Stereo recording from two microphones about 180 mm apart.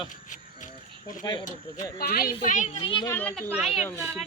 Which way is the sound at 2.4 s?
45° left (ahead or behind).